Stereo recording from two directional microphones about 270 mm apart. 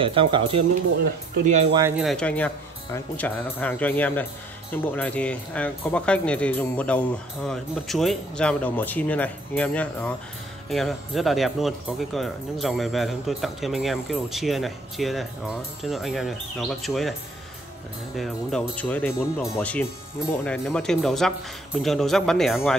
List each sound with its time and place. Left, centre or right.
0.0 s speech: centre
1.8 s speech: centre
18.1 s speech: centre